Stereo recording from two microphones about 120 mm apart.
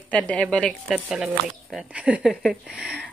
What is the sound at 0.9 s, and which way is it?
Speech, 5° right (ahead or behind).